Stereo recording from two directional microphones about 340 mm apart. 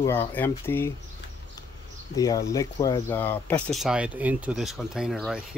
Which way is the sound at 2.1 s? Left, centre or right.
Centre.